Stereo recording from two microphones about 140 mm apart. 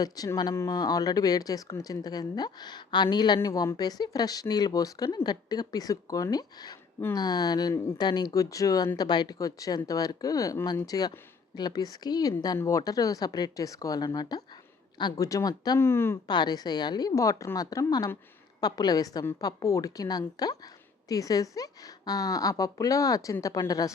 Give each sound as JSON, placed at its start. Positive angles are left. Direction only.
{"t": 0.0, "sound": "speech", "side_deg": 25}
{"t": 15.8, "sound": "speech", "side_deg": 15}
{"t": 16.2, "sound": "speech", "side_deg": 30}